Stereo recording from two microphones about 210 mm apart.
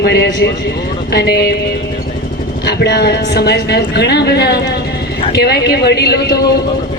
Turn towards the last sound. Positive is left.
turn(degrees=50)  # may be behind; listen again after turning